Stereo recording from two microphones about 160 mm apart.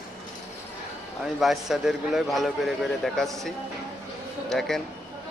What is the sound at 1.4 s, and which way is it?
A man's voice, centre (ahead or behind).